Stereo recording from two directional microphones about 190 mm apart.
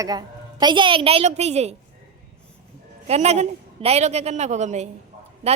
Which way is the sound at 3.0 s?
35° right (ahead or behind).